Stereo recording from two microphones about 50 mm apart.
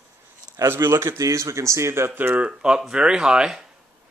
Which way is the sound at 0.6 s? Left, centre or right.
Right.